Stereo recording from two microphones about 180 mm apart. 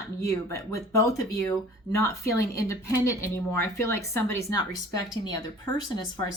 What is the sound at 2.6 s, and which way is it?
Speech, 15° left (ahead or behind).